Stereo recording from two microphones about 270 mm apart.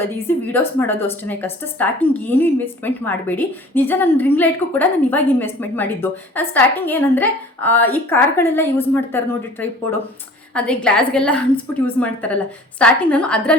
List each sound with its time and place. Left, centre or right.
0.0 s a woman's voice: centre